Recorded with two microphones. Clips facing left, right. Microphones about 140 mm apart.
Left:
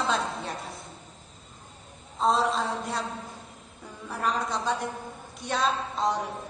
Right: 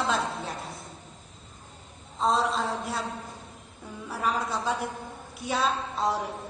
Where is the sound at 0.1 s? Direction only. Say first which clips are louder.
Even; centre (ahead or behind).